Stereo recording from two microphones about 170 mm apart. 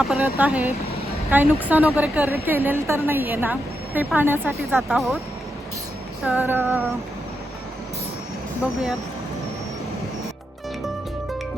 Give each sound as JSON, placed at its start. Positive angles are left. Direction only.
{"t": 0.0, "sound": "a woman's voice", "side_deg": -10}
{"t": 4.8, "sound": "speech", "side_deg": 0}
{"t": 6.2, "sound": "a woman's voice", "side_deg": -10}